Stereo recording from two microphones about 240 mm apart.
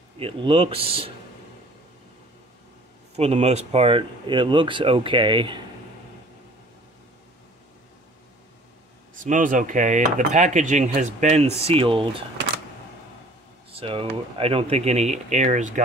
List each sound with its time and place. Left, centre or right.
0.2 s cutlery: right
3.2 s cutlery: right
9.2 s cutlery: right
13.7 s cutlery: right